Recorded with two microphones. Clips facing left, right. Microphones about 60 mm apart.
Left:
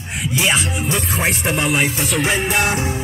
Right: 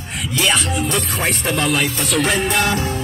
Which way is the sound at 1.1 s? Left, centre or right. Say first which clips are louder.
Left 1 dB; centre.